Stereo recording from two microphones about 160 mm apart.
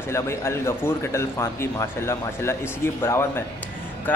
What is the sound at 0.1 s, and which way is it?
Speech, 15° left (ahead or behind).